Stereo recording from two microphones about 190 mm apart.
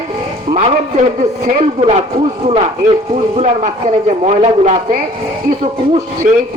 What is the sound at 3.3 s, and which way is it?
Speech, 35° right (ahead or behind).